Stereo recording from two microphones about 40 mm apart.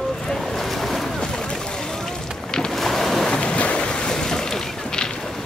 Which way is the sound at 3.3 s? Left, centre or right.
Left.